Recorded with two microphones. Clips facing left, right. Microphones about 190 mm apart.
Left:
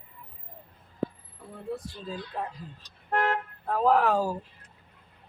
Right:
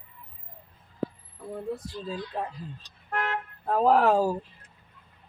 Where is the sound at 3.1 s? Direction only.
40° left (ahead or behind).